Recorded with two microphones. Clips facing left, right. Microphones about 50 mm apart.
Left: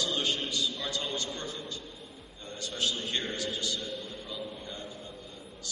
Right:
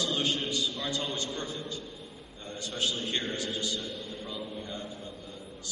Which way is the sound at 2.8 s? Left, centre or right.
Right.